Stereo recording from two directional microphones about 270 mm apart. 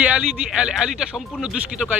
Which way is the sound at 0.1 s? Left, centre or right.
Centre.